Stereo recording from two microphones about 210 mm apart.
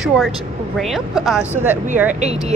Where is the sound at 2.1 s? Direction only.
35° right (ahead or behind).